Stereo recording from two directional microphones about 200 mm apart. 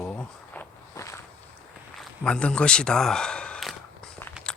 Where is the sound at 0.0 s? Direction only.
5° left (ahead or behind).